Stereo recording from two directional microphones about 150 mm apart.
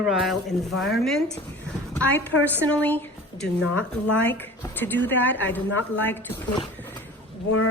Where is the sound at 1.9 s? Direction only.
10° left (ahead or behind).